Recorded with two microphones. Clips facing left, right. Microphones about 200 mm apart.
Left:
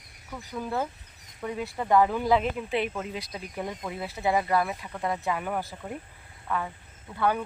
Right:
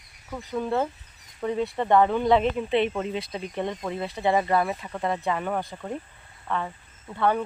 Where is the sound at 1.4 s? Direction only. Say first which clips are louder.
Right 6 dB; 30° right (ahead or behind).